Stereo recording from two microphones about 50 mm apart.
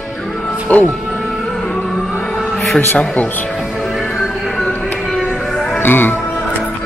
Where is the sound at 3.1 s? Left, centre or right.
Left.